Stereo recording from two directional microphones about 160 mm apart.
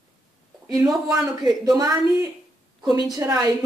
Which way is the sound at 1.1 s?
20° right (ahead or behind).